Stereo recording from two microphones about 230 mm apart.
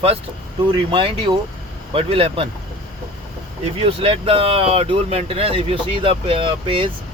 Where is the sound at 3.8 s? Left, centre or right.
Right.